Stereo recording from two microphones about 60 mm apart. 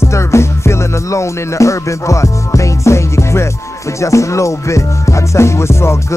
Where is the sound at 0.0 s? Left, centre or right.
Left.